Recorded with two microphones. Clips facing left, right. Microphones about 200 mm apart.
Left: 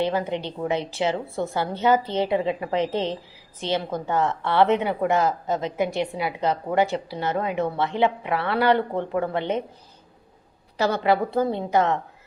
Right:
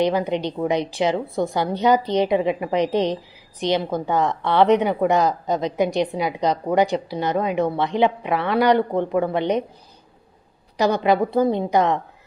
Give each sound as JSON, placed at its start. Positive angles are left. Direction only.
{"t": 0.0, "sound": "a woman's voice", "side_deg": -15}
{"t": 10.8, "sound": "a woman's voice", "side_deg": -15}